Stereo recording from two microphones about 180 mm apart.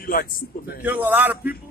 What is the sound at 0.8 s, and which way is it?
Speech, 10° right (ahead or behind).